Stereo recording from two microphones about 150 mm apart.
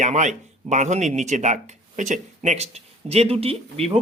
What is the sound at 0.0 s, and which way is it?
Speech, 55° right (ahead or behind).